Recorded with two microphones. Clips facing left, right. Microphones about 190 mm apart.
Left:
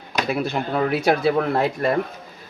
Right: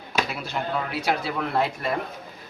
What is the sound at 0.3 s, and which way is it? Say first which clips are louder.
Speech: left 6 dB; 55° left (ahead or behind).